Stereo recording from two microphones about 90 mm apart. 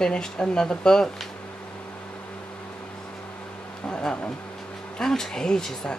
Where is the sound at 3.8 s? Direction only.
10° left (ahead or behind).